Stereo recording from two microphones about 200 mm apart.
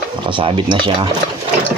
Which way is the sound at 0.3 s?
25° right (ahead or behind).